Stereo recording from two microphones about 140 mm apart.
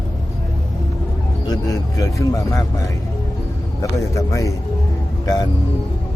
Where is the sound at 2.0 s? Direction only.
25° left (ahead or behind).